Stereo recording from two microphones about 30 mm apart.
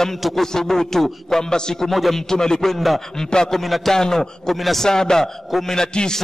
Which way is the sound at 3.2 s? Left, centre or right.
Left.